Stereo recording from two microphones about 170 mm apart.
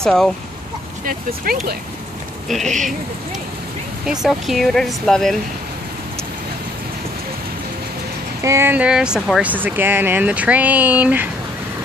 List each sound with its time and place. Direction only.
0.0 s speech: 5° left (ahead or behind)
1.0 s speech: 60° right (ahead or behind)
2.4 s speech: centre (ahead or behind)
4.0 s speech: 5° right (ahead or behind)
8.4 s speech: 15° right (ahead or behind)